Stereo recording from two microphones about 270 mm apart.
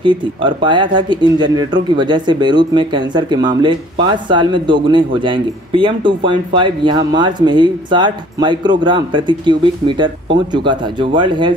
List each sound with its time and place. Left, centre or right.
0.0 s speech: centre